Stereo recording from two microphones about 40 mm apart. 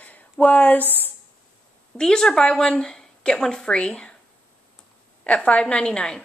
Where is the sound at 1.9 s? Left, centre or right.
Centre.